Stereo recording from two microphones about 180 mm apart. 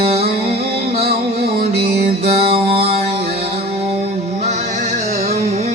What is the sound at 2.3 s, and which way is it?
Music, 30° right (ahead or behind).